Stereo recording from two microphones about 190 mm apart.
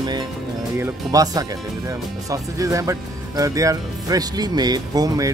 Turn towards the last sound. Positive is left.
turn(degrees=-20)  # may be behind; listen again after turning